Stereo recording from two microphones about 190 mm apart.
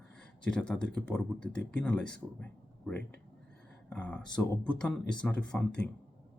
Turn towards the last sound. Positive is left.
turn(degrees=5)  # may be behind; listen again after turning